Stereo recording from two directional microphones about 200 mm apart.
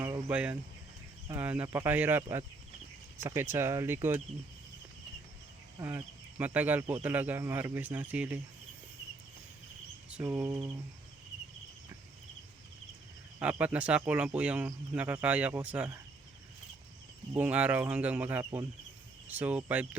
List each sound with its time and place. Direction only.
0.0 s a sound: 10° right (ahead or behind)
1.4 s speech: 10° right (ahead or behind)
5.8 s speech: 10° right (ahead or behind)
10.1 s a sound: 5° right (ahead or behind)
13.4 s speech: 5° right (ahead or behind)
17.3 s speech: 5° right (ahead or behind)